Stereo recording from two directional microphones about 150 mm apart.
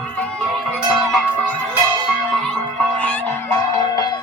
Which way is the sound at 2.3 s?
5° left (ahead or behind).